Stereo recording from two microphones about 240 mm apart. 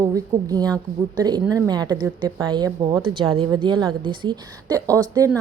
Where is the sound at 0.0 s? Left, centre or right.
Centre.